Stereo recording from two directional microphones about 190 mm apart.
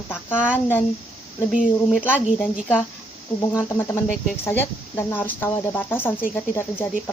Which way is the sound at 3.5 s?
15° left (ahead or behind).